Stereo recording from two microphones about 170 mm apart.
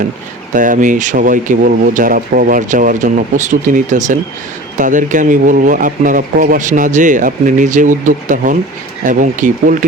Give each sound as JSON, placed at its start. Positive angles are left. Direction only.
{"t": 0.5, "sound": "speech", "side_deg": -50}